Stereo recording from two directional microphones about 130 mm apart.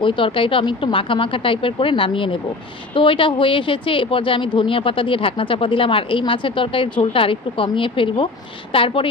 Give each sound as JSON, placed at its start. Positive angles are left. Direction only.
{"t": 0.0, "sound": "a woman's voice", "side_deg": 40}